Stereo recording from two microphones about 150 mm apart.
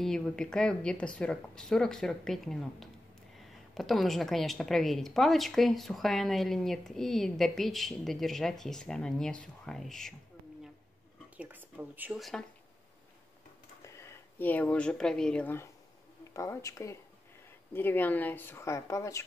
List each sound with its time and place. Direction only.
0.0 s a woman's voice: 5° left (ahead or behind)
11.3 s speech: 10° right (ahead or behind)
12.2 s a woman's voice: centre (ahead or behind)
13.8 s speech: 20° left (ahead or behind)